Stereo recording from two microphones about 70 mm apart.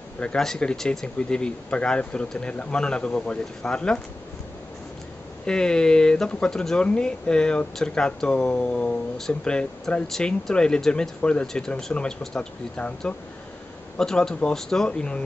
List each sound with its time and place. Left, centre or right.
0.2 s speech: centre
5.4 s speech: centre